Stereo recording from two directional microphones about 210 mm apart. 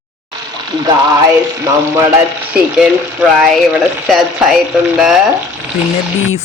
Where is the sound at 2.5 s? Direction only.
5° right (ahead or behind).